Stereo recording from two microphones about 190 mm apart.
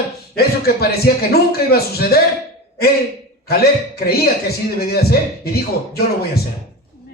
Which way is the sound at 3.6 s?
55° left (ahead or behind).